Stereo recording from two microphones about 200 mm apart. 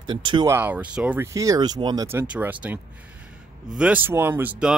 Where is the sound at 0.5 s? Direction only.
10° right (ahead or behind).